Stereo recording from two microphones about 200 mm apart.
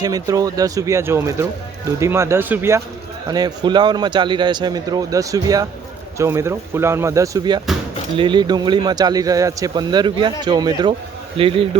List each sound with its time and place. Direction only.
0.0 s speech: 20° right (ahead or behind)